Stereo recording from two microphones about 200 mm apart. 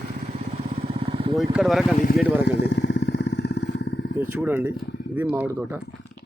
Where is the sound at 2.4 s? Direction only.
55° left (ahead or behind).